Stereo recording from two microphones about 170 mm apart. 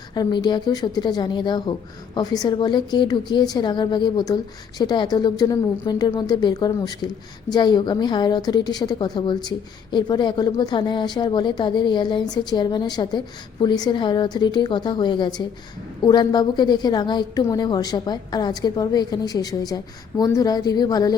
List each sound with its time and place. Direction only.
0.1 s a woman's voice: 25° left (ahead or behind)